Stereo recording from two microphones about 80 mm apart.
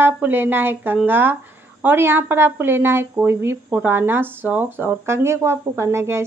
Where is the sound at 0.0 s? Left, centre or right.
Right.